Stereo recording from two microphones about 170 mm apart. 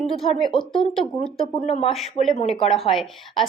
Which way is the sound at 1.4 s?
35° left (ahead or behind).